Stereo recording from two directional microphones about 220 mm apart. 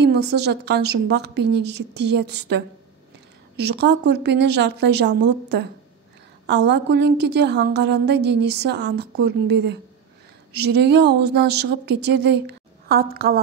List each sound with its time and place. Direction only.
0.0 s a woman's voice: 50° right (ahead or behind)